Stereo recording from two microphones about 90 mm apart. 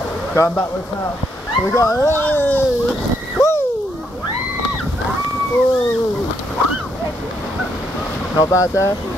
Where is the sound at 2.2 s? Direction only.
20° left (ahead or behind).